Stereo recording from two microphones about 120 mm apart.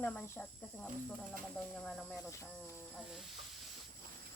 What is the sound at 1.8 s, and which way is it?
Speech, 5° left (ahead or behind).